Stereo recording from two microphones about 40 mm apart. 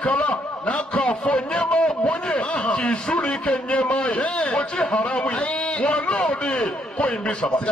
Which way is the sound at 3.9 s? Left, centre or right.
Centre.